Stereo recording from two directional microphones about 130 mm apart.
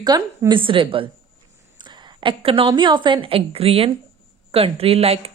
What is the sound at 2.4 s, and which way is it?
A woman's voice, 45° right (ahead or behind).